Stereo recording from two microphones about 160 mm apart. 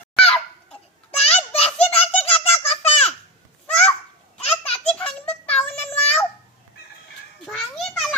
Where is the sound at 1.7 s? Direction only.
40° left (ahead or behind).